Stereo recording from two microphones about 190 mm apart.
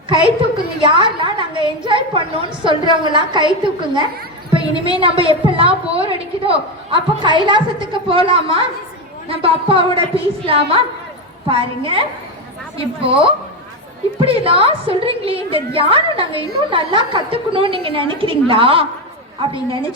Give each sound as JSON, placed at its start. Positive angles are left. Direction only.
{"t": 0.1, "sound": "a woman's voice", "side_deg": -25}